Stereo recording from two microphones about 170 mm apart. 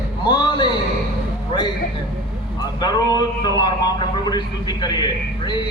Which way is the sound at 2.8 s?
25° left (ahead or behind).